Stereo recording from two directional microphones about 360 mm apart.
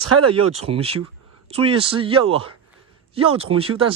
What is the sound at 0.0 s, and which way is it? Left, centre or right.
Speech, right.